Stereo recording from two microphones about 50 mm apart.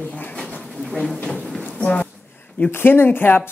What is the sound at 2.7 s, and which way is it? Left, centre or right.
Speech, left.